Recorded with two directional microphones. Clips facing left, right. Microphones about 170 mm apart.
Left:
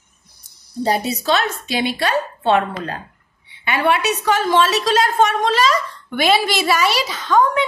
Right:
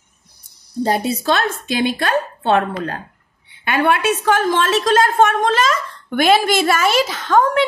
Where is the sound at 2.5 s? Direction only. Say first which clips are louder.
Right 3 dB; 70° right (ahead or behind).